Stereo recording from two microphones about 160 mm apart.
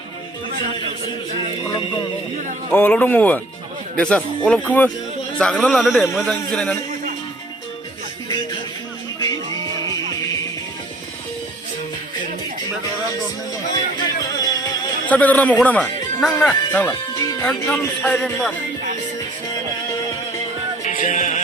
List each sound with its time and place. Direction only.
2.7 s speech: 10° left (ahead or behind)
9.1 s music: 20° left (ahead or behind)
9.6 s music: 30° right (ahead or behind)
13.9 s music: 25° left (ahead or behind)
15.1 s speech: 10° left (ahead or behind)
16.9 s music: 25° left (ahead or behind)
17.4 s speech: 5° left (ahead or behind)
20.8 s music: 50° left (ahead or behind)